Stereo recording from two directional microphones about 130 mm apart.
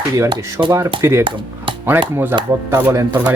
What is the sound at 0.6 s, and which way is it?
Speech, 20° right (ahead or behind).